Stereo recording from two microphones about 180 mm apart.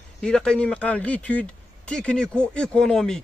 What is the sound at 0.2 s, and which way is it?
A man's voice, 5° left (ahead or behind).